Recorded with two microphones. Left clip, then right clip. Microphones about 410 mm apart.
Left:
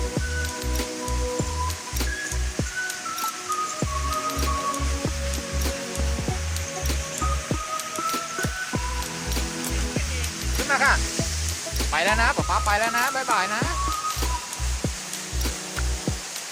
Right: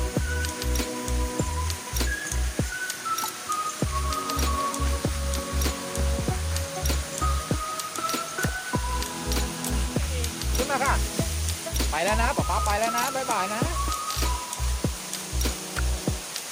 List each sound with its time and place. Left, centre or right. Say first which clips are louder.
10.7 s music: left 6 dB; left